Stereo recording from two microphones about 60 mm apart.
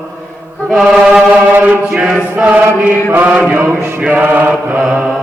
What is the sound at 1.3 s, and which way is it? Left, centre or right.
Mantra, right.